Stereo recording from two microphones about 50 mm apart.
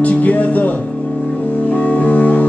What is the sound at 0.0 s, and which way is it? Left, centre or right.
Music, left.